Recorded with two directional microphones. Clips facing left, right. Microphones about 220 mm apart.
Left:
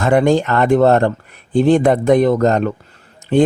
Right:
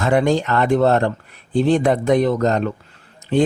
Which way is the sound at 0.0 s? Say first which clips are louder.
Left 4 dB; 50° left (ahead or behind).